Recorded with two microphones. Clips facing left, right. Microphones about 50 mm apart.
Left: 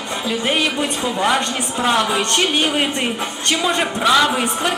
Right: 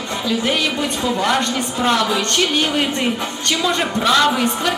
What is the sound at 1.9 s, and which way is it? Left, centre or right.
Speech, left.